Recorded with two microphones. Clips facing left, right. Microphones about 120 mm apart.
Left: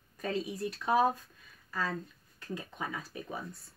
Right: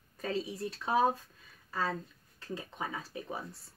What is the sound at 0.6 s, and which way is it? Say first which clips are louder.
Speech: left 2 dB; 25° right (ahead or behind).